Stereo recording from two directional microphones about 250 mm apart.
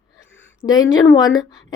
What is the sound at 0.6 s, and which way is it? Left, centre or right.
Speech, left.